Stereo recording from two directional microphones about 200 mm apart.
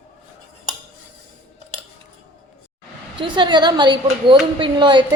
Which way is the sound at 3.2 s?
25° right (ahead or behind).